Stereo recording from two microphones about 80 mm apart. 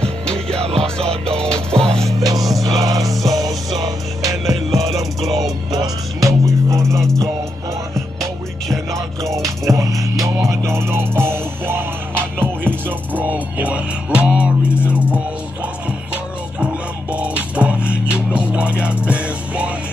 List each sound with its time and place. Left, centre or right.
0.0 s music: centre
2.0 s music: right
4.8 s music: centre
5.7 s music: right
8.9 s music: right; by 15.2 s centre
17.1 s music: centre